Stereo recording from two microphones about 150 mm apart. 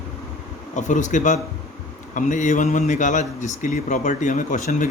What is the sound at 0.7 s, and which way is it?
A man's voice, 55° left (ahead or behind).